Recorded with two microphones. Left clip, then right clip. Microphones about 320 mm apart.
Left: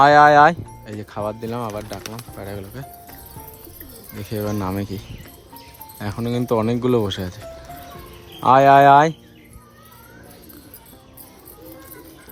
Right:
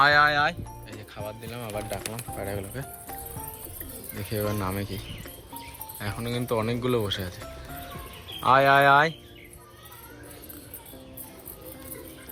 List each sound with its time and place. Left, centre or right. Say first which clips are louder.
0.0 s speech: left 9 dB; centre
2.4 s speech: even; centre
4.2 s speech: left 4 dB; centre
6.4 s speech: left 8 dB; centre
8.4 s speech: left 7 dB; centre